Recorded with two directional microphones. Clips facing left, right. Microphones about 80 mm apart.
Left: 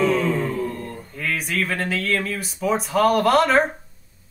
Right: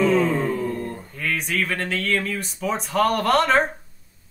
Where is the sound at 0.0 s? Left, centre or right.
Right.